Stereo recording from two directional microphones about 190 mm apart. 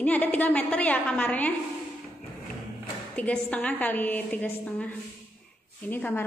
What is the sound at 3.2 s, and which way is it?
A woman's voice, 10° left (ahead or behind).